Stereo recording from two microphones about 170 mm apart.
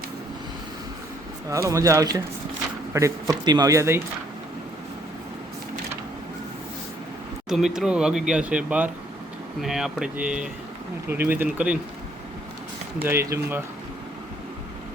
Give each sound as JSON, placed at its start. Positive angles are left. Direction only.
{"t": 1.5, "sound": "speech", "side_deg": -20}
{"t": 7.5, "sound": "speech", "side_deg": -5}
{"t": 13.0, "sound": "speech", "side_deg": -15}